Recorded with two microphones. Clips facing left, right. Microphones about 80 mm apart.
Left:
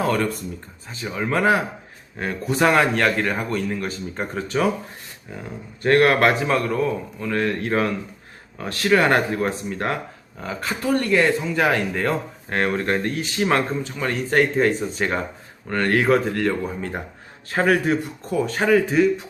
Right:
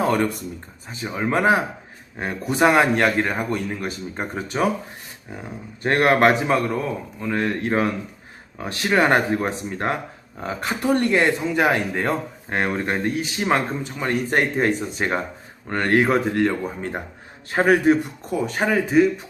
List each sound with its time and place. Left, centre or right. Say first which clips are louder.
0.0 s a man's voice: right 1 dB; right
17.5 s a man's voice: right 3 dB; right